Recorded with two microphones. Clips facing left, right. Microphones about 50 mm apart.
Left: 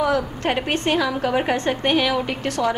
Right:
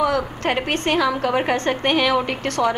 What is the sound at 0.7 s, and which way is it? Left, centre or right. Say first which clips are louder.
Speech: even; right.